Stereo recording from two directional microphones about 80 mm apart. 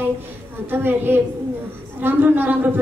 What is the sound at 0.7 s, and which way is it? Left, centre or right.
A woman's voice, right.